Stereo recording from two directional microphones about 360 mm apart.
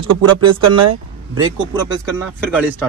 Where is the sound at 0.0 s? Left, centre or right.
Right.